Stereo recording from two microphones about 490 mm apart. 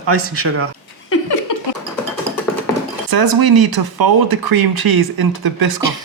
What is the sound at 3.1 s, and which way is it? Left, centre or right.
Speech, right.